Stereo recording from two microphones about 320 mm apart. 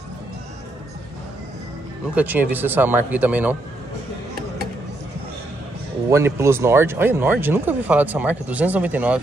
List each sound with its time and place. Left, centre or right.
2.1 s speech: centre
6.0 s speech: centre